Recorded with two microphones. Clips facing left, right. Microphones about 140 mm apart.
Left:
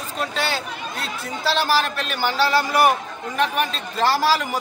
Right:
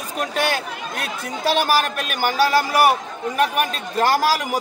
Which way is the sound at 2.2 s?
10° right (ahead or behind).